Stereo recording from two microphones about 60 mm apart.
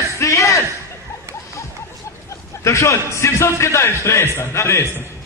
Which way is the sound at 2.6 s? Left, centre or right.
Left.